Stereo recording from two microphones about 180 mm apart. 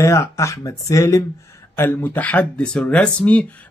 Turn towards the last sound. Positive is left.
turn(degrees=10)  # may be behind; listen again after turning